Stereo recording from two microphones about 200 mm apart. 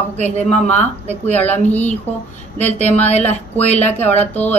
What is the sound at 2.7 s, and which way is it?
Speech, 30° left (ahead or behind).